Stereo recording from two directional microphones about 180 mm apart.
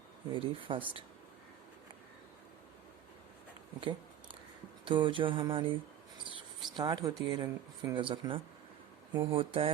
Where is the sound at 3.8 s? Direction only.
25° right (ahead or behind).